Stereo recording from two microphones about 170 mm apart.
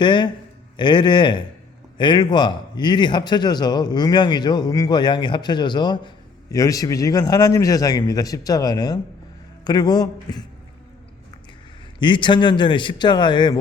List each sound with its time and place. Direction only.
0.0 s a man's voice: 25° left (ahead or behind)
11.9 s a man's voice: 25° left (ahead or behind)